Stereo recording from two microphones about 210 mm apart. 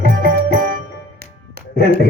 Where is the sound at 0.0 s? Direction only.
45° right (ahead or behind).